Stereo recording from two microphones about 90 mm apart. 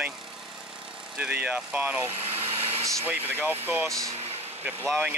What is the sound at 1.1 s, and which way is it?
Speech, 15° right (ahead or behind).